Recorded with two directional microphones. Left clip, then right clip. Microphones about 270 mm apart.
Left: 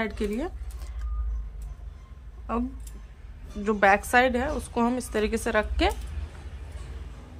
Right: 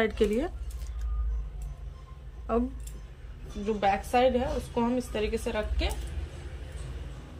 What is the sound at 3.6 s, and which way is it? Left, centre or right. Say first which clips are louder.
A woman's voice: left 6 dB; centre.